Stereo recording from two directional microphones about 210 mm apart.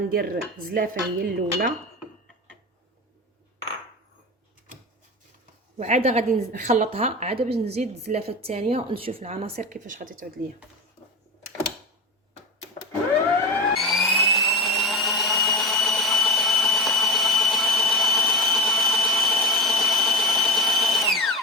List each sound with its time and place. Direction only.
0.1 s dishes: 45° right (ahead or behind)
5.7 s a woman's voice: 35° right (ahead or behind)
13.7 s a sound: centre (ahead or behind)